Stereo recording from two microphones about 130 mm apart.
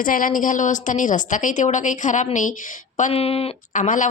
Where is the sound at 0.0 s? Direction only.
90° left.